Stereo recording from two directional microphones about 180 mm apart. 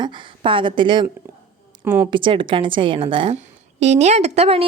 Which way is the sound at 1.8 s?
10° right (ahead or behind).